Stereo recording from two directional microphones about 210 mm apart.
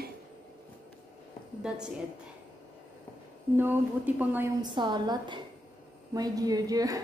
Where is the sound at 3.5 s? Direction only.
10° right (ahead or behind).